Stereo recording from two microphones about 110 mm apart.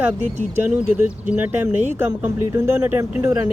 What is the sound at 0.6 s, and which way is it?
Speech, 10° right (ahead or behind).